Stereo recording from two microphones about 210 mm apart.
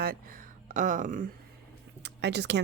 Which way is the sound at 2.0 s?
55° right (ahead or behind).